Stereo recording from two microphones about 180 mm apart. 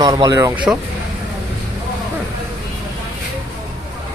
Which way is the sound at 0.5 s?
5° right (ahead or behind).